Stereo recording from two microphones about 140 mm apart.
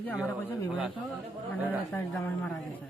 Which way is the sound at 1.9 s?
15° left (ahead or behind).